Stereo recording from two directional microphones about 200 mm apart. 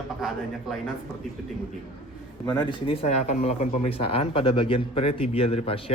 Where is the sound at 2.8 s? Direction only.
30° left (ahead or behind).